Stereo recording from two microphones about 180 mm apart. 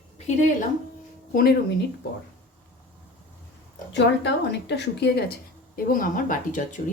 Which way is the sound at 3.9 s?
75° left (ahead or behind).